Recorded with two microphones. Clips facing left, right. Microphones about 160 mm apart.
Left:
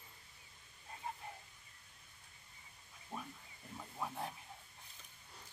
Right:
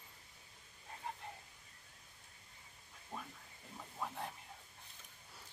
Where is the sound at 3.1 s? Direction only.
10° left (ahead or behind).